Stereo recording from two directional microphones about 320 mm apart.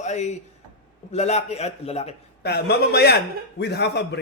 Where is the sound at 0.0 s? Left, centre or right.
Left.